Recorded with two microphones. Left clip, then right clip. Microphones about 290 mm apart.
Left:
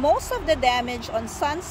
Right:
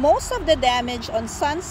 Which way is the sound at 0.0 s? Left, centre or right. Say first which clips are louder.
Right 3 dB; centre.